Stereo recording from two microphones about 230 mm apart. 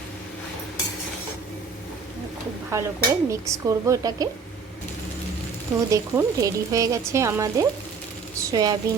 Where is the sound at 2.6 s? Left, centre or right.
Centre.